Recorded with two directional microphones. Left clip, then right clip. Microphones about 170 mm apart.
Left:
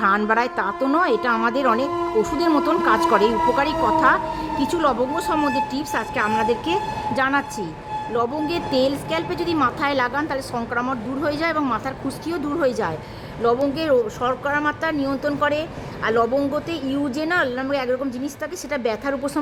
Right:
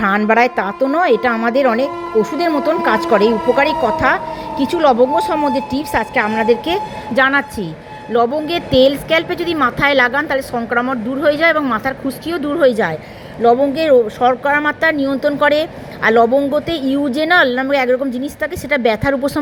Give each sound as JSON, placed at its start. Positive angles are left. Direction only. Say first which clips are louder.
{"t": 0.3, "sound": "a woman's voice", "louder": "right 7 dB", "side_deg": -15}